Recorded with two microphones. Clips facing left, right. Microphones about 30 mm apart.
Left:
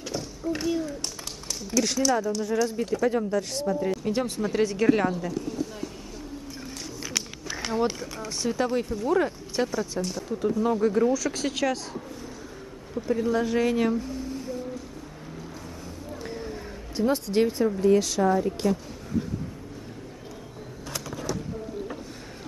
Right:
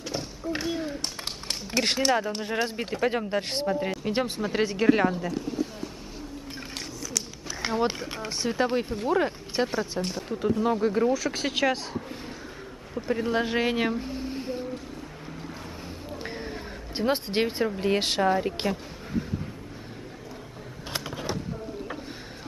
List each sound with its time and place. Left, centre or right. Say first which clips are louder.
0.1 s speech: left 1 dB; right
4.1 s speech: left 1 dB; right
7.6 s speech: even; right
8.8 s speech: left 1 dB; right
9.1 s speech: left 1 dB; right
10.0 s speech: even; right
10.6 s speech: left 2 dB; right
13.0 s speech: left 1 dB; right
16.3 s a sound: left 1 dB; right
17.7 s speech: left 5 dB; right
20.9 s a sound: even; right